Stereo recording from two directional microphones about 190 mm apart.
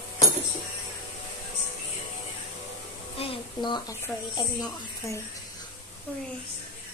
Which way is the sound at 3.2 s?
25° left (ahead or behind).